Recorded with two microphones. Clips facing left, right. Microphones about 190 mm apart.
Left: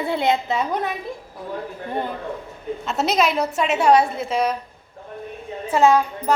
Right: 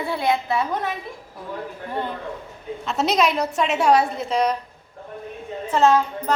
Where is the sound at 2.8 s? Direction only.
Centre (ahead or behind).